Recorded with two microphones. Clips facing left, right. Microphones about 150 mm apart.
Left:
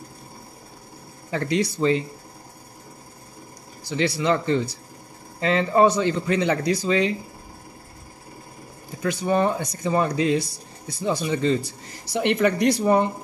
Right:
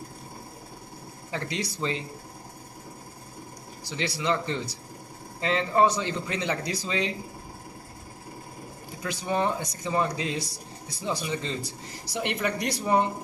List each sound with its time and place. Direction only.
1.3 s speech: 55° left (ahead or behind)
3.9 s a man's voice: 55° left (ahead or behind)
9.0 s a man's voice: 55° left (ahead or behind)
12.1 s a man's voice: 65° left (ahead or behind)